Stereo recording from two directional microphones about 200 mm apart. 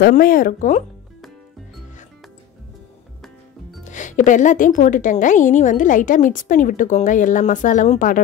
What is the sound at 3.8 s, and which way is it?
Speech, 40° left (ahead or behind).